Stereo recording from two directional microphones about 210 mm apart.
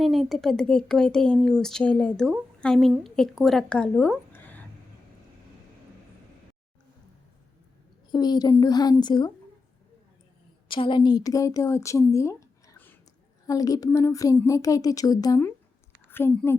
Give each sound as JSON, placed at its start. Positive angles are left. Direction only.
{"t": 0.0, "sound": "a woman's voice", "side_deg": 0}
{"t": 8.1, "sound": "a woman's voice", "side_deg": 20}
{"t": 10.7, "sound": "a woman's voice", "side_deg": 25}